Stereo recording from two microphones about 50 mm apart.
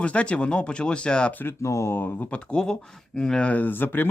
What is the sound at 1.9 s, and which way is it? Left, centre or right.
Speech, left.